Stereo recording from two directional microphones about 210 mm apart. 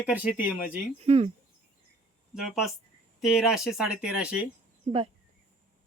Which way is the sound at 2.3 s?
Centre (ahead or behind).